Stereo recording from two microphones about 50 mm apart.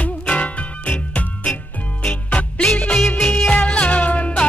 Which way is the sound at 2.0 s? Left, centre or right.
Left.